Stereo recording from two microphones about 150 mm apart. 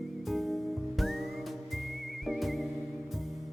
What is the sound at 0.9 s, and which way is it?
Music, centre (ahead or behind).